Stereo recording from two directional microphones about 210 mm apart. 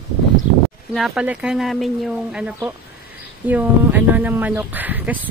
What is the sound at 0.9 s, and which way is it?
Speech, 5° right (ahead or behind).